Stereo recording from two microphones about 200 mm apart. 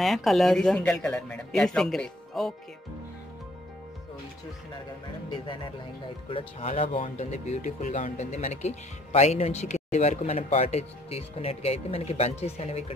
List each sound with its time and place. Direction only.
0.0 s speech: centre (ahead or behind)
5.3 s speech: 25° left (ahead or behind)